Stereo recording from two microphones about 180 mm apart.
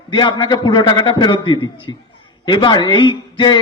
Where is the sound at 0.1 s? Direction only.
25° left (ahead or behind).